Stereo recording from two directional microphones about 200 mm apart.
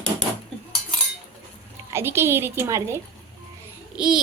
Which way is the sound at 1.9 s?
10° right (ahead or behind).